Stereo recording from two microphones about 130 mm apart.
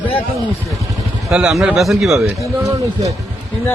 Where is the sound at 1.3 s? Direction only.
5° right (ahead or behind).